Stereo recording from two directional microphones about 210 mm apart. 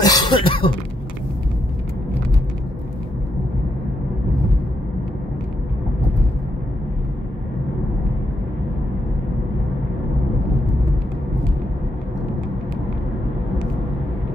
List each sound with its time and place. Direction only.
0.0 s cough: 20° left (ahead or behind)